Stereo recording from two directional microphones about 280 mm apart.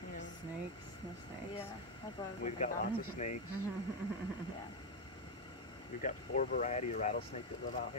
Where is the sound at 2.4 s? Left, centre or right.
Left.